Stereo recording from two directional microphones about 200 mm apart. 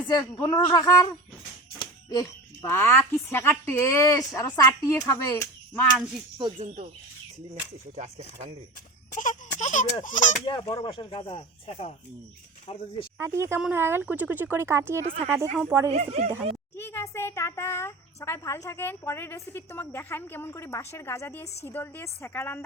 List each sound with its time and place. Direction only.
0.1 s a child's voice: 20° left (ahead or behind)
9.1 s a sound: 40° left (ahead or behind)
9.6 s speech: 40° left (ahead or behind)
10.6 s speech: 30° left (ahead or behind)
13.1 s speech: 15° right (ahead or behind)
15.0 s a woman's voice: 30° right (ahead or behind)
16.7 s a child's voice: 10° left (ahead or behind)